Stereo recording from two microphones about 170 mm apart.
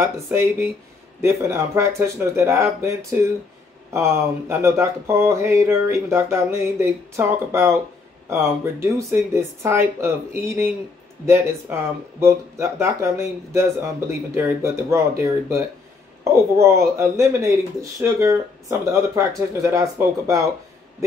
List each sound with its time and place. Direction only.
0.0 s speech: 15° right (ahead or behind)